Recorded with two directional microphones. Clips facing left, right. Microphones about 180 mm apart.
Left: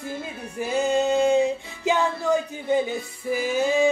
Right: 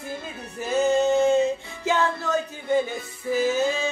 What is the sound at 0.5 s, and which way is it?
Music, 15° left (ahead or behind).